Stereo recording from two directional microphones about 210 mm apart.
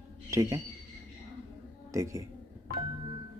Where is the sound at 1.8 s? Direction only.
15° right (ahead or behind).